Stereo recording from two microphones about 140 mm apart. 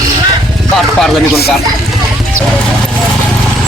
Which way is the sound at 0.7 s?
5° left (ahead or behind).